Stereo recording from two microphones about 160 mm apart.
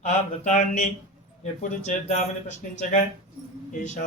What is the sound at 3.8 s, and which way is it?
Speech, 50° left (ahead or behind).